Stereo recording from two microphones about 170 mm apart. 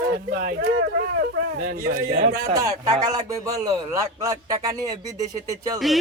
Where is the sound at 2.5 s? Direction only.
20° right (ahead or behind).